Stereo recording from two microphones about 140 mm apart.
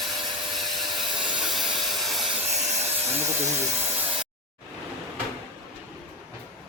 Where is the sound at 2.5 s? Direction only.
55° right (ahead or behind).